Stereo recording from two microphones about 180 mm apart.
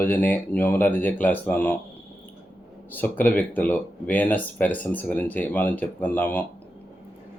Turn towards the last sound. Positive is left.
turn(degrees=10)  # may be behind; listen again after turning